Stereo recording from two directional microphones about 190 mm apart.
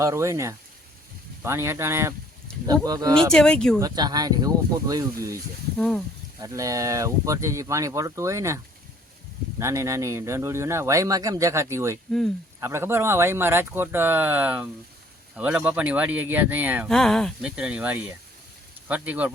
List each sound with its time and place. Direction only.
0.0 s speech: 15° right (ahead or behind)
2.5 s a sound: 5° left (ahead or behind)
2.8 s speech: 20° right (ahead or behind)
3.3 s speech: 5° left (ahead or behind)
3.8 s speech: 20° right (ahead or behind)
6.4 s speech: 15° right (ahead or behind)
16.9 s speech: centre (ahead or behind)